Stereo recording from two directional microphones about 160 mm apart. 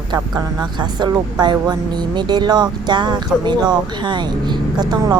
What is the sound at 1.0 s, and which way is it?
Speech, 25° right (ahead or behind).